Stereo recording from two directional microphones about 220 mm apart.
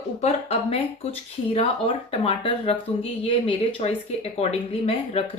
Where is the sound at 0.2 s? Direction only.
25° left (ahead or behind).